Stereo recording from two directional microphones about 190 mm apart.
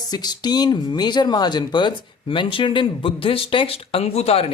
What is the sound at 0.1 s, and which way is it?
Speech, 20° left (ahead or behind).